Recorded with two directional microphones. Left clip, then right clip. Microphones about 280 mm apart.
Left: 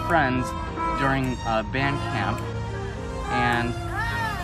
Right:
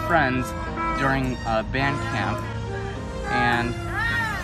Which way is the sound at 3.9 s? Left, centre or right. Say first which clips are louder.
Right 4 dB; right.